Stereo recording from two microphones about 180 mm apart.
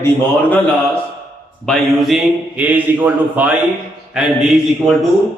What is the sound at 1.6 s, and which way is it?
A man's voice, centre (ahead or behind).